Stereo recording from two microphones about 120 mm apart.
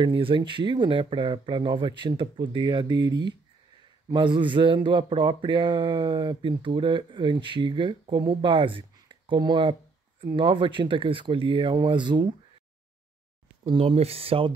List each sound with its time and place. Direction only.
0.0 s speech: 45° right (ahead or behind)
13.7 s speech: 55° right (ahead or behind)